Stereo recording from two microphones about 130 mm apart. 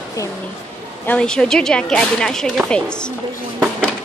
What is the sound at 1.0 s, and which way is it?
Speech, 5° left (ahead or behind).